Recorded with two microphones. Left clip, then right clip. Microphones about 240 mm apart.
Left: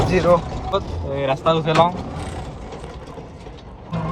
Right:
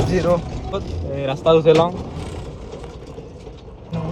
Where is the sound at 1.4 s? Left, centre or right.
Left.